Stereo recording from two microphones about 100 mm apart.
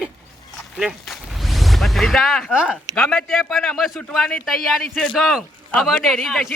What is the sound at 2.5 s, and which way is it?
Speech, 10° right (ahead or behind).